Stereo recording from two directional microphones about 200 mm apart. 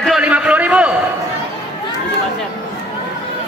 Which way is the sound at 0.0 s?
5° right (ahead or behind).